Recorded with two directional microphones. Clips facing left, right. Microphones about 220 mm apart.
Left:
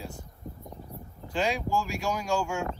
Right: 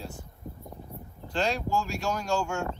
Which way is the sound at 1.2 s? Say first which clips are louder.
Even; 5° left (ahead or behind).